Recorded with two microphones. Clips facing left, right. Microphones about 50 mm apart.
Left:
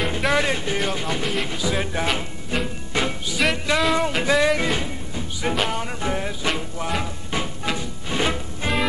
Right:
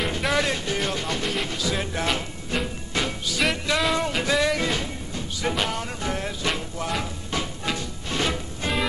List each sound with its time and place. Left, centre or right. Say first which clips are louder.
0.3 s speech: left 2 dB; centre
2.5 s music: left 2 dB; centre
2.9 s music: left 3 dB; centre
3.3 s music: left 3 dB; centre
4.1 s music: left 3 dB; centre